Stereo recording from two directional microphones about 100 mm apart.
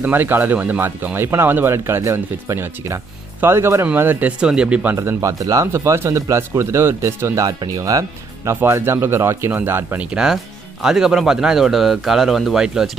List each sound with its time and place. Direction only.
0.0 s speech: 20° right (ahead or behind)
4.4 s speech: 10° right (ahead or behind)
4.9 s speech: 35° right (ahead or behind)
7.4 s speech: 40° right (ahead or behind)
8.5 s speech: 25° right (ahead or behind)
10.1 s speech: 5° right (ahead or behind)